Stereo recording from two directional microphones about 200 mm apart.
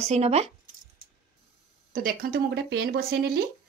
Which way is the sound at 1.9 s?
45° right (ahead or behind).